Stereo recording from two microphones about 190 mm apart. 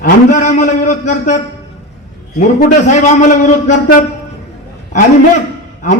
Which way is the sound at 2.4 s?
40° left (ahead or behind).